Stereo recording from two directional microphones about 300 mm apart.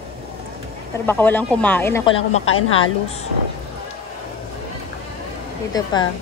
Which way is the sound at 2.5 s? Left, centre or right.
Left.